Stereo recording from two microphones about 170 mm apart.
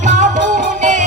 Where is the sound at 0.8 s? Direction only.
45° right (ahead or behind).